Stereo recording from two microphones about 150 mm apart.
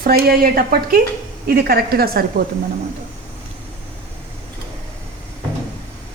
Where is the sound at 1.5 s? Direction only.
90° right.